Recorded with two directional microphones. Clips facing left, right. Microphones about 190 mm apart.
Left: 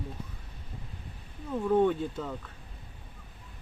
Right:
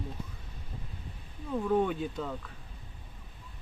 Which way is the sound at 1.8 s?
Centre (ahead or behind).